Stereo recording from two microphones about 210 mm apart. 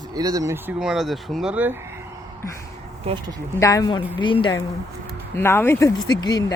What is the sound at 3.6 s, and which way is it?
Speech, 15° left (ahead or behind).